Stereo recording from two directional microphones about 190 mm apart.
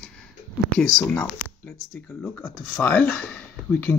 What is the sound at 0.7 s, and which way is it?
Speech, 5° left (ahead or behind).